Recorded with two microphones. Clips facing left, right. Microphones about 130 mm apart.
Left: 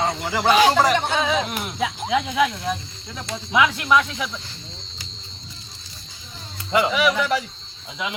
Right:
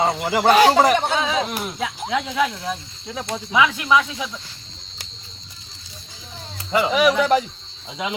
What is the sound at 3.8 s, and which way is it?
Speech, 10° right (ahead or behind).